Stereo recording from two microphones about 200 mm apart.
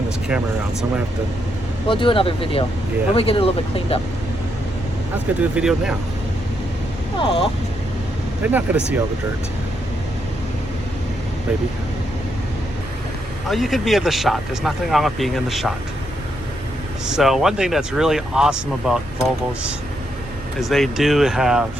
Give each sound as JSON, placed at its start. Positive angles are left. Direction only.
{"t": 0.3, "sound": "speech", "side_deg": -5}
{"t": 1.9, "sound": "speech", "side_deg": 25}
{"t": 5.4, "sound": "speech", "side_deg": -5}
{"t": 7.2, "sound": "speech", "side_deg": 25}
{"t": 8.4, "sound": "speech", "side_deg": -10}
{"t": 13.5, "sound": "speech", "side_deg": 0}
{"t": 17.1, "sound": "speech", "side_deg": 0}
{"t": 20.6, "sound": "speech", "side_deg": 0}